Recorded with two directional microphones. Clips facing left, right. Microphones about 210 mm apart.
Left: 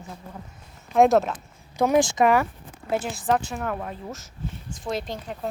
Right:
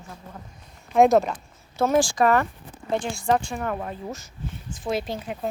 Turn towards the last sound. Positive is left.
turn(degrees=-5)  # may be behind; listen again after turning